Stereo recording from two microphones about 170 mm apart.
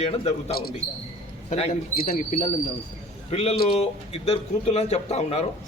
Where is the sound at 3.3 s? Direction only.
35° left (ahead or behind).